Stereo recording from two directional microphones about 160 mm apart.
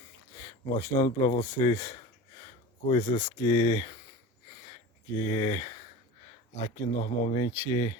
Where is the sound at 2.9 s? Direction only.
35° left (ahead or behind).